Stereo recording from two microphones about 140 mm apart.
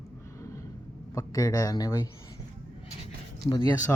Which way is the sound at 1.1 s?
25° left (ahead or behind).